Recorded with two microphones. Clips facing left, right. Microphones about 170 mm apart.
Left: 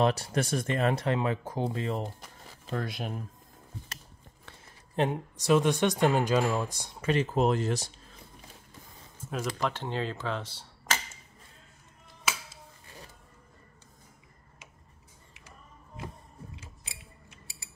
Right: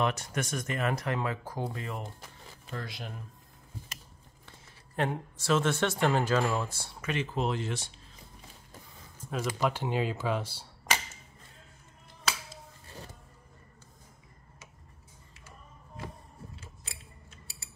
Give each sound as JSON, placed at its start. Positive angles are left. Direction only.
{"t": 0.0, "sound": "speech", "side_deg": 30}
{"t": 2.7, "sound": "speech", "side_deg": 50}
{"t": 4.9, "sound": "speech", "side_deg": 20}
{"t": 7.0, "sound": "speech", "side_deg": 35}
{"t": 9.3, "sound": "speech", "side_deg": -5}